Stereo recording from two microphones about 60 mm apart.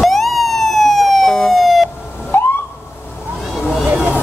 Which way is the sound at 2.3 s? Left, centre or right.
Left.